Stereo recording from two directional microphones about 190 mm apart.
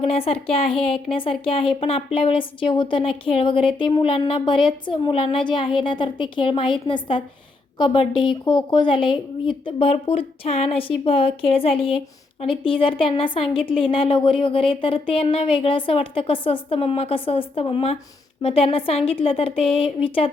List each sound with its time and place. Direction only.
0.0 s a woman's voice: 30° left (ahead or behind)